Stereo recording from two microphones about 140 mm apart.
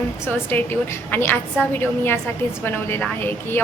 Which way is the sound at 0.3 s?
15° left (ahead or behind).